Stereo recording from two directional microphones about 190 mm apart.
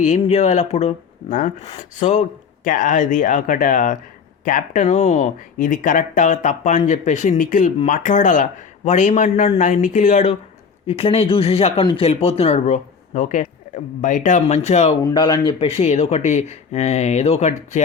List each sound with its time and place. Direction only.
0.0 s speech: 35° left (ahead or behind)
15.1 s speech: 20° left (ahead or behind)